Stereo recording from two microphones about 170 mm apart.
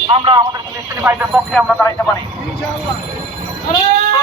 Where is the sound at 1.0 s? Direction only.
10° right (ahead or behind).